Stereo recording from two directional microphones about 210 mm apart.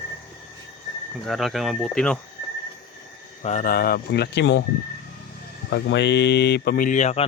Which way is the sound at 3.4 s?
35° left (ahead or behind).